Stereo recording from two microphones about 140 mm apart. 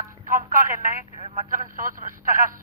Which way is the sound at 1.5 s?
75° right (ahead or behind).